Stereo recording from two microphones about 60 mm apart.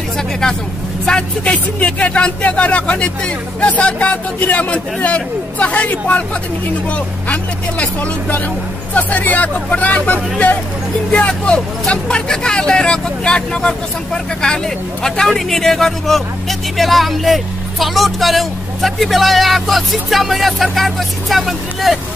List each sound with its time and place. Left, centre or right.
1.0 s a man's voice: centre
7.8 s a man's voice: left; by 21.9 s centre